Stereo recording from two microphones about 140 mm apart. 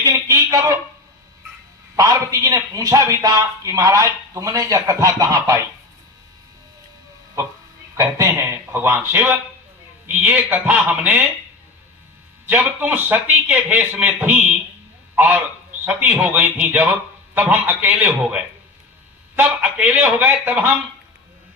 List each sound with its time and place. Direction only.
0.0 s a sound: 20° right (ahead or behind)
2.0 s a man's voice: 25° right (ahead or behind)
7.9 s a man's voice: 20° right (ahead or behind)
12.5 s a man's voice: 15° right (ahead or behind)
15.1 s a sound: 10° right (ahead or behind)
15.9 s a man's voice: 10° right (ahead or behind)
19.4 s a man's voice: 10° right (ahead or behind)